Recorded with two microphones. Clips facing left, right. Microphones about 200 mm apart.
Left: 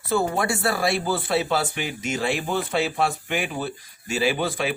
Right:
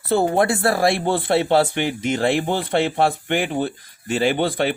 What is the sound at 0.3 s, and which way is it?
Speech, 55° right (ahead or behind).